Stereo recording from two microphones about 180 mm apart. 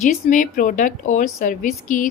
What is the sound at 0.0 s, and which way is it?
A woman's voice, 45° left (ahead or behind).